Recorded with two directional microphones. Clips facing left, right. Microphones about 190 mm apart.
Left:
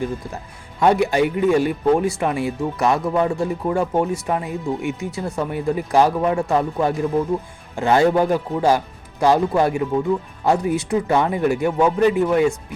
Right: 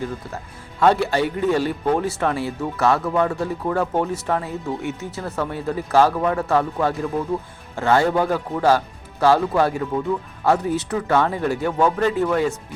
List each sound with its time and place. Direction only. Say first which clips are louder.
0.8 s a man's voice: left 2 dB; 15° left (ahead or behind)